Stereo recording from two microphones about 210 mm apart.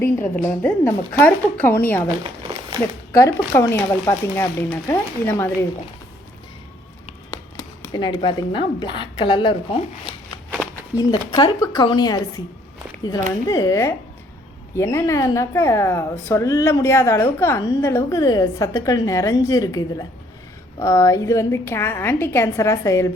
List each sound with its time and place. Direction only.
0.3 s a woman's voice: 10° left (ahead or behind)
3.1 s a woman's voice: 15° left (ahead or behind)
7.9 s a woman's voice: 20° left (ahead or behind)